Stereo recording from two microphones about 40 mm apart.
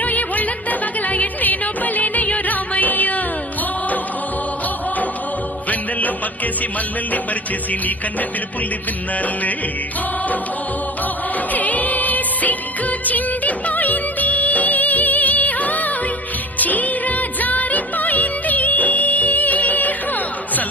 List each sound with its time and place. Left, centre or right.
0.0 s music: left
11.5 s music: left